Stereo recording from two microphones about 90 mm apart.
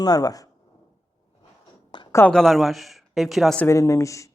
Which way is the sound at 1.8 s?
60° left (ahead or behind).